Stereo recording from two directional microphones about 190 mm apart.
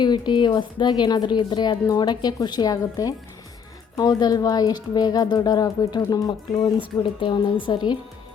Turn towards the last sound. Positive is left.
turn(degrees=25)  # may be behind; listen again after turning